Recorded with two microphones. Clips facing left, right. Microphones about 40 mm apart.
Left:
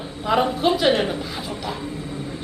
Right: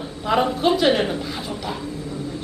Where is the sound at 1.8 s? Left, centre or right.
Left.